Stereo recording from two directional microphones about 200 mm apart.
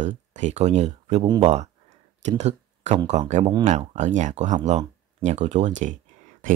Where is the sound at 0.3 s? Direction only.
35° right (ahead or behind).